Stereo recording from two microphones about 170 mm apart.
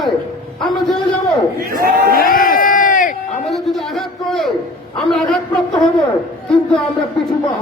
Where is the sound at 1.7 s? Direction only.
60° right (ahead or behind).